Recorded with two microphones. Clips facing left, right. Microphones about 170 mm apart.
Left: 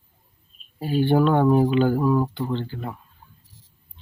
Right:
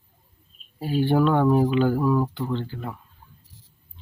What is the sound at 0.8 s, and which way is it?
Speech, 5° right (ahead or behind).